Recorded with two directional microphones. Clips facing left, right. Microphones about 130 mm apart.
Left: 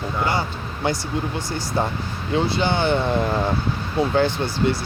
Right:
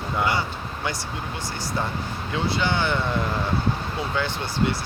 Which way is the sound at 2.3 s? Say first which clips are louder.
Left 4 dB; 30° left (ahead or behind).